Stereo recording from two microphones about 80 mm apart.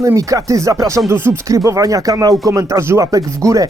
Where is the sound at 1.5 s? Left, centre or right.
Right.